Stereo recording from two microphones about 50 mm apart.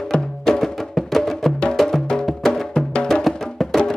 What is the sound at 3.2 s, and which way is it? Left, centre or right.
Music, centre.